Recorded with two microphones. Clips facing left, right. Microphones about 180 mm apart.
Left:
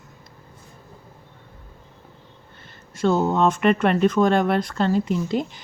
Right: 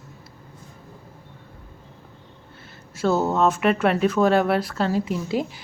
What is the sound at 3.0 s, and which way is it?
A woman's voice, 5° right (ahead or behind).